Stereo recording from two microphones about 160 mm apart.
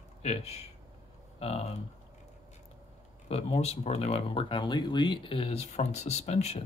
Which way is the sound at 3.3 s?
40° left (ahead or behind).